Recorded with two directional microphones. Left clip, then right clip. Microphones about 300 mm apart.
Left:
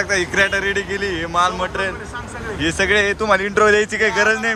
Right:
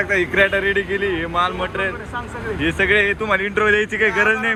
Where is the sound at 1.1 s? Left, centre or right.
Centre.